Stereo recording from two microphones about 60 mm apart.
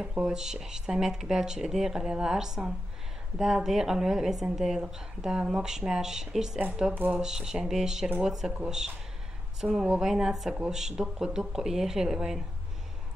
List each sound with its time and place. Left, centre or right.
0.2 s speech: centre
6.9 s speech: right
7.2 s speech: centre